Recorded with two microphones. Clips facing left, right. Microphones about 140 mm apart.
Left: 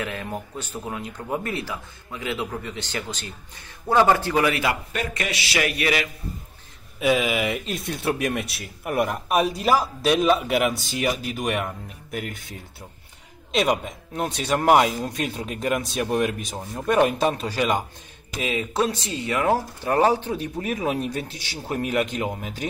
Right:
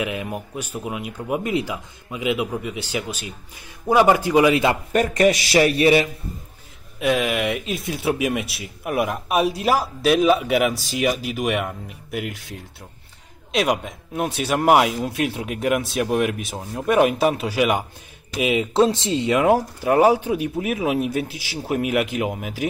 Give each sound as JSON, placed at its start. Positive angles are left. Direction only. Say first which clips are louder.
{"t": 0.0, "sound": "speech", "louder": "right 4 dB", "side_deg": -15}
{"t": 4.9, "sound": "speech", "louder": "right 11 dB", "side_deg": -40}
{"t": 7.0, "sound": "speech", "louder": "right 1 dB", "side_deg": 0}